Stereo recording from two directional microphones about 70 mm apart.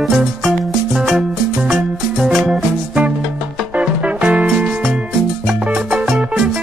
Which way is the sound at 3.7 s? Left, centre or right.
Centre.